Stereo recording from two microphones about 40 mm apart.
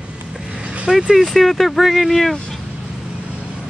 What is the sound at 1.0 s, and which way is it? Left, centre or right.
Speech, centre.